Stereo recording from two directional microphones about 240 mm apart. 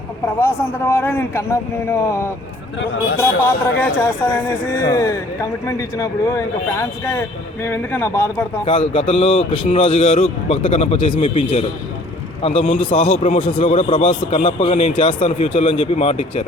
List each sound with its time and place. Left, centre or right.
0.3 s speech: centre
8.6 s a man's voice: left